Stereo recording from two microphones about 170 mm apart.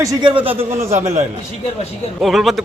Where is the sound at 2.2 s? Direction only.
Centre (ahead or behind).